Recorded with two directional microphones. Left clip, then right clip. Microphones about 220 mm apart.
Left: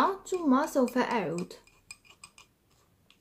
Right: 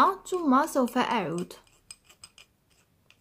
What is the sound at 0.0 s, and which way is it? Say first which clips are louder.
Speech: right 4 dB; 30° right (ahead or behind).